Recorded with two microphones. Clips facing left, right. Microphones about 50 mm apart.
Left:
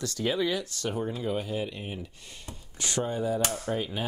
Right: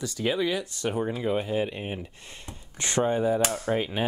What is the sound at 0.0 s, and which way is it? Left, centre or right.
Speech, centre.